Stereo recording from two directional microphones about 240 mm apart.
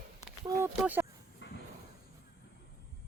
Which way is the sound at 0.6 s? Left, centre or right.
Centre.